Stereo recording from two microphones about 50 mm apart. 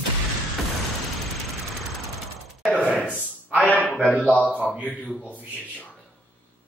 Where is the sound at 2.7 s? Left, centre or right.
Centre.